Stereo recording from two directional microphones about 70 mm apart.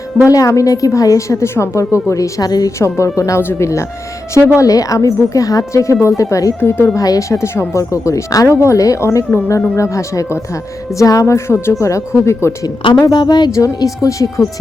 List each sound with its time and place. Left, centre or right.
0.3 s a woman's voice: left
2.7 s a woman's voice: left
4.5 s a woman's voice: left
6.6 s speech: left
6.9 s a woman's voice: left
7.8 s a woman's voice: left
10.9 s a woman's voice: left
13.1 s a woman's voice: left
13.7 s a woman's voice: left